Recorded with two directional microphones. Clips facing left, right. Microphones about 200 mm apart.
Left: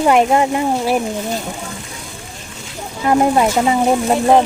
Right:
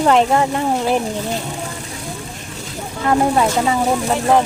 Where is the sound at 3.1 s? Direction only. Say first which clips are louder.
Left 2 dB; 15° left (ahead or behind).